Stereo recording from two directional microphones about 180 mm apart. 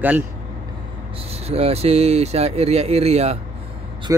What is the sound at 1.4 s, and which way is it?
Speech, 35° right (ahead or behind).